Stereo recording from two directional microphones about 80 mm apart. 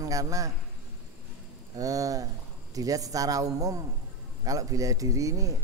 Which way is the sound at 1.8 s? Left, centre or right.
Right.